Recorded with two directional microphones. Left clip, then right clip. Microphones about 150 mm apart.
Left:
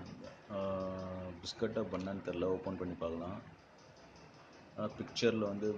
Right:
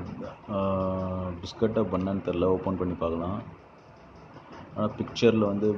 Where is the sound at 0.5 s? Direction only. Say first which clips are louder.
Right 11 dB; 5° left (ahead or behind).